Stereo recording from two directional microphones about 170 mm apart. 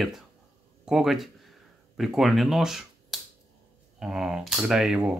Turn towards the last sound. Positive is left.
turn(degrees=-5)  # may be behind; listen again after turning